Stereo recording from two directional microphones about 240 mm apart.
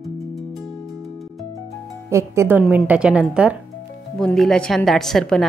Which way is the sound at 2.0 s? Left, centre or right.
Centre.